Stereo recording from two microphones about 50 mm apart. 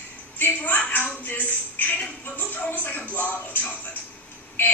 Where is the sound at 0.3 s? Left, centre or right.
Left.